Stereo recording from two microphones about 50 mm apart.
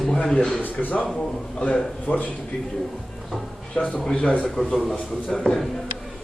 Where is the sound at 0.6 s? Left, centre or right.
Left.